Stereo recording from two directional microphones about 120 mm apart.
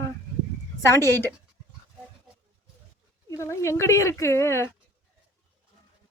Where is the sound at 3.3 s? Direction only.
25° left (ahead or behind).